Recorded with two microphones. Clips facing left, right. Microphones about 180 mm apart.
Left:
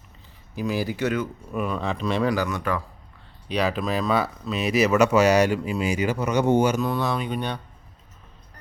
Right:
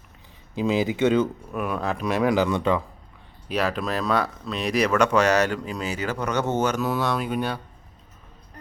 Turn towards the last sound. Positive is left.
turn(degrees=-5)  # may be behind; listen again after turning